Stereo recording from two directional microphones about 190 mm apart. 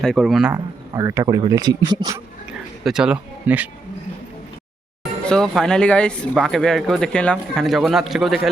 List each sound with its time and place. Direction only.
0.0 s speech: centre (ahead or behind)
0.5 s a man's voice: 15° right (ahead or behind)
2.5 s a sound: 5° right (ahead or behind)
5.2 s speech: 5° left (ahead or behind)